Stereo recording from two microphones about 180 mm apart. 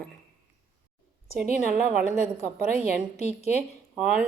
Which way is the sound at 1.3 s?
50° right (ahead or behind).